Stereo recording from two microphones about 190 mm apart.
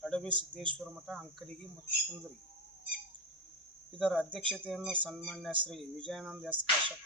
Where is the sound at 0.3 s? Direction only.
25° right (ahead or behind).